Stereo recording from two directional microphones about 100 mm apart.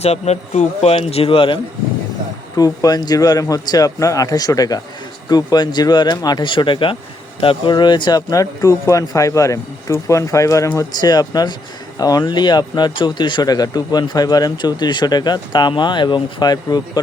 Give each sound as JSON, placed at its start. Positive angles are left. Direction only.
{"t": 0.0, "sound": "speech", "side_deg": 90}
{"t": 2.6, "sound": "speech", "side_deg": 40}